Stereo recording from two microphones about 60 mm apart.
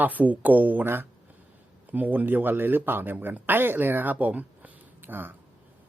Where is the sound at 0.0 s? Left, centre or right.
Right.